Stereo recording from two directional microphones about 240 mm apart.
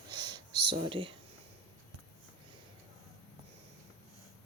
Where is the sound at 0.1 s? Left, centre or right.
Centre.